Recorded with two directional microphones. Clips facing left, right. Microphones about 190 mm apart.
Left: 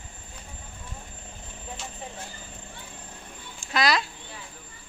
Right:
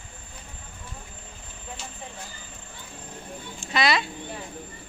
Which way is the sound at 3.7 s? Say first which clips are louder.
Right 1 dB; centre (ahead or behind).